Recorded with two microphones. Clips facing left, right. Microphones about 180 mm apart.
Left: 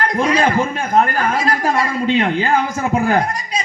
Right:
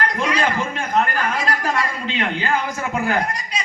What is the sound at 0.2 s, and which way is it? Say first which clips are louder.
Speech: left 8 dB; 45° left (ahead or behind).